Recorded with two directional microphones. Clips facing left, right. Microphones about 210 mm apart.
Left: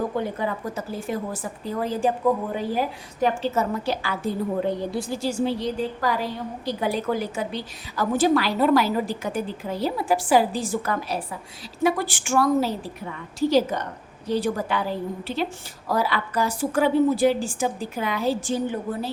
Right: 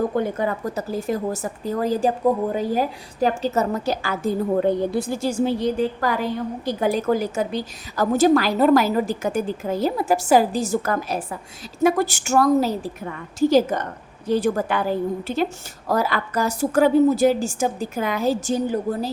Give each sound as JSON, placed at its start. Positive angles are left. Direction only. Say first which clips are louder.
{"t": 0.2, "sound": "a woman's voice", "louder": "right 4 dB", "side_deg": -45}